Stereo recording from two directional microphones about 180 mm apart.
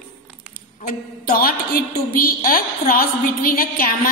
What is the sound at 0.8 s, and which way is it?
A woman's voice, 55° left (ahead or behind).